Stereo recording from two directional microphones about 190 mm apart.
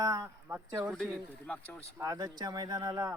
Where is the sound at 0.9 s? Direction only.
Centre (ahead or behind).